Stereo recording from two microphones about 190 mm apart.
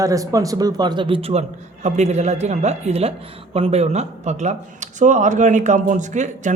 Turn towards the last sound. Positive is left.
turn(degrees=-40)  # may be behind; listen again after turning